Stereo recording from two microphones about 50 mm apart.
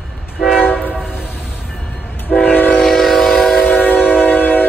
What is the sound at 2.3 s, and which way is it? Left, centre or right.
Train, centre.